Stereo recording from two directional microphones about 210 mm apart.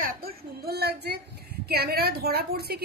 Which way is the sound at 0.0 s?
45° right (ahead or behind).